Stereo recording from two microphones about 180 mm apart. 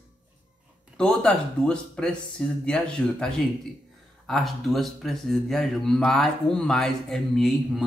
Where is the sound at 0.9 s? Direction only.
5° left (ahead or behind).